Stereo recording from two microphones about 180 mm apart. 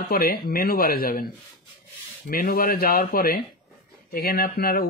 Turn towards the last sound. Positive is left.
turn(degrees=55)  # may be behind; listen again after turning